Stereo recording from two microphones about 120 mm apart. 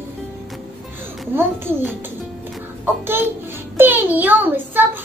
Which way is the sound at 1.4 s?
20° right (ahead or behind).